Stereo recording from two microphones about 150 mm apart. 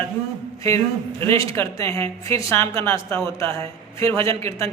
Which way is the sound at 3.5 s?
40° right (ahead or behind).